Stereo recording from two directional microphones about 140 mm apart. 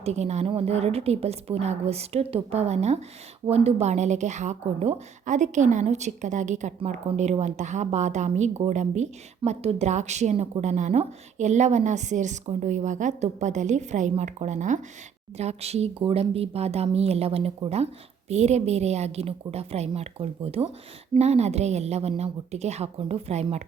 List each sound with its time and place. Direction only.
0.0 s a woman's voice: 50° right (ahead or behind)